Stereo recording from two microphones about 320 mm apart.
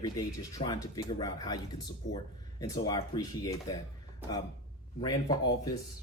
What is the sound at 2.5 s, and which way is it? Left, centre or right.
Speech, centre.